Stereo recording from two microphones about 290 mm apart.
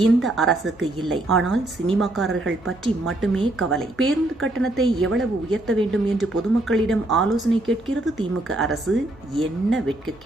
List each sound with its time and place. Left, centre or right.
0.0 s speech: centre
3.9 s speech: right
4.6 s speech: centre